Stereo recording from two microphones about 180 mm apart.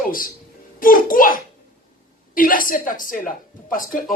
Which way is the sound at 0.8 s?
50° left (ahead or behind).